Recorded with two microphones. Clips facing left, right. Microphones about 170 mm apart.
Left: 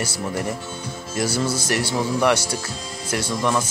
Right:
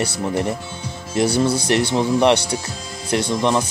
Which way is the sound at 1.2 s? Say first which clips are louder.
Right 6 dB; 20° right (ahead or behind).